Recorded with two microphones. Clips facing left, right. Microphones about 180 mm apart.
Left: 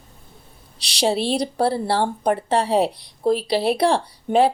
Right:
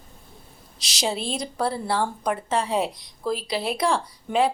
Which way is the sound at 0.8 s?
65° left (ahead or behind).